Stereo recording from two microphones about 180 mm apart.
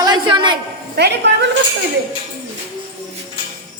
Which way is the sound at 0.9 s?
65° right (ahead or behind).